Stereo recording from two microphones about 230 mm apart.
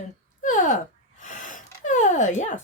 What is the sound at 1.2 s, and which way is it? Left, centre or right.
Gasp, left.